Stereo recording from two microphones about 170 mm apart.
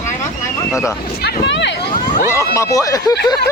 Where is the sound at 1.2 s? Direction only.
85° left.